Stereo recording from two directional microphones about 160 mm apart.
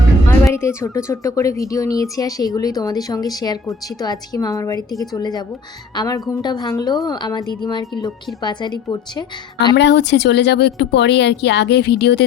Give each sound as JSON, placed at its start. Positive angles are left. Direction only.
{"t": 0.3, "sound": "a woman's voice", "side_deg": 15}
{"t": 9.7, "sound": "speech", "side_deg": 90}